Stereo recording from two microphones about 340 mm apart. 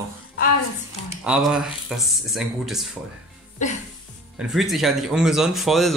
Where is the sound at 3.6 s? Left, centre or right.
Left.